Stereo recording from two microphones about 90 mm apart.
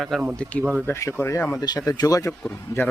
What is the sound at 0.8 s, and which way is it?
Speech, 30° left (ahead or behind).